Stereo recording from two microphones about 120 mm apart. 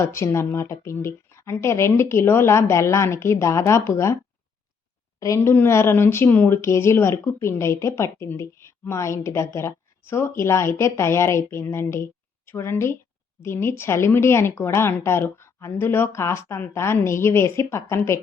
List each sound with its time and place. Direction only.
0.0 s speech: 25° left (ahead or behind)
5.4 s speech: 20° left (ahead or behind)